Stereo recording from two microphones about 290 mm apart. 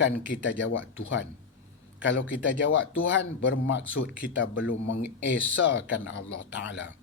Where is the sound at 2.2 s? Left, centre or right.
Left.